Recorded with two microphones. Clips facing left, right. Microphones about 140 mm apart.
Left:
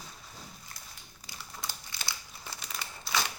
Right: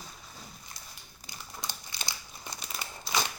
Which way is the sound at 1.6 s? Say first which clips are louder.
Right 2 dB; 20° right (ahead or behind).